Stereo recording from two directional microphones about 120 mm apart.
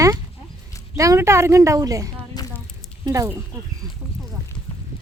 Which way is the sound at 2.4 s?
35° left (ahead or behind).